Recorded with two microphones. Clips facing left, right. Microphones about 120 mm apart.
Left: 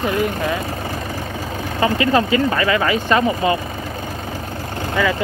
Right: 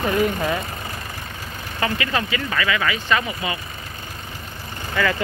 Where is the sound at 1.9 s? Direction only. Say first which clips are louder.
Left 8 dB; 30° left (ahead or behind).